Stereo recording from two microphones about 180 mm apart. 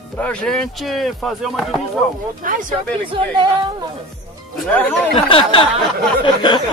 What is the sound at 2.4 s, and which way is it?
Speech, 50° right (ahead or behind).